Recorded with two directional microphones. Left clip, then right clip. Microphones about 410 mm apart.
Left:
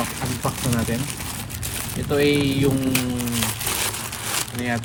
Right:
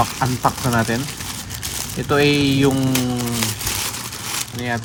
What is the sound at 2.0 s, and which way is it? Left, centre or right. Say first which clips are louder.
Speech: right 3 dB; centre.